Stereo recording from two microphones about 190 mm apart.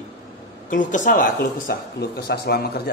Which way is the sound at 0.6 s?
45° left (ahead or behind).